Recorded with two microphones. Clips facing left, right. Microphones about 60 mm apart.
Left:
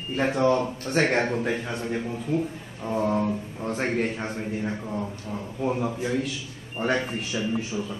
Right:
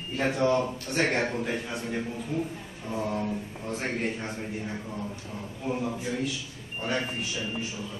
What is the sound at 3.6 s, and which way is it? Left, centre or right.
Speech, left.